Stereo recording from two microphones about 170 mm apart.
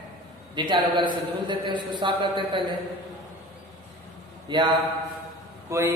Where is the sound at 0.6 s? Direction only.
25° right (ahead or behind).